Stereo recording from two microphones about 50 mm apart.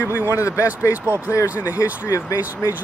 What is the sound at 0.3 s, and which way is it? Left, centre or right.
Speech, left.